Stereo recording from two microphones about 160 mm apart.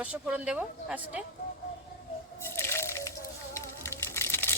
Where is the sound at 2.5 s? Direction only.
15° left (ahead or behind).